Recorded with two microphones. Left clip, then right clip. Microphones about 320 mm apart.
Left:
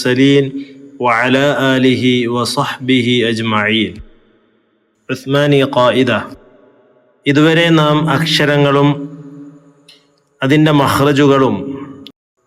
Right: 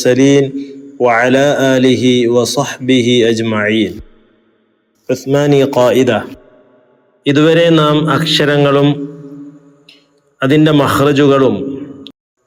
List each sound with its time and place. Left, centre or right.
0.0 s a man's voice: centre
2.8 s speech: left
3.2 s a man's voice: centre
5.0 s a man's voice: centre
7.3 s a man's voice: centre
10.3 s a man's voice: centre